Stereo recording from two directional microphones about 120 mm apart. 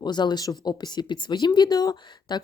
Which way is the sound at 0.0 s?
35° left (ahead or behind).